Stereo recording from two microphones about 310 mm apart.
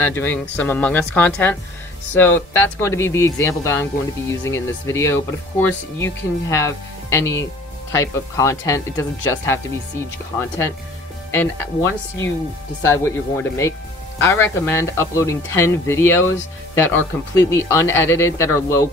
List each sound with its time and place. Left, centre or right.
0.0 s speech: centre
11.3 s speech: centre